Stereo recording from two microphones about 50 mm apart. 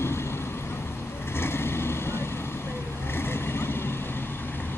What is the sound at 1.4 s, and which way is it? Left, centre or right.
Vehicle, left.